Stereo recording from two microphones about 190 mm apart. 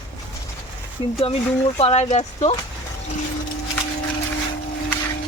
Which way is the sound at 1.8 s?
30° left (ahead or behind).